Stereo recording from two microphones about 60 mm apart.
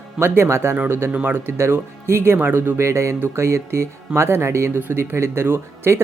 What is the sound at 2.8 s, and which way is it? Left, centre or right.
Speech, right.